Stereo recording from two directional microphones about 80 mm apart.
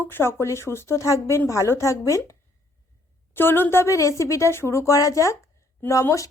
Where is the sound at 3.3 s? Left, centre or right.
Left.